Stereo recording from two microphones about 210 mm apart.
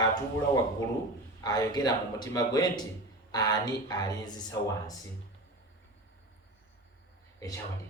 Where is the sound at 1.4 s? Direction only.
20° left (ahead or behind).